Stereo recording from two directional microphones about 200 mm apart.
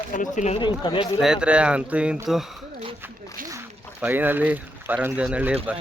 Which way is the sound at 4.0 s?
10° right (ahead or behind).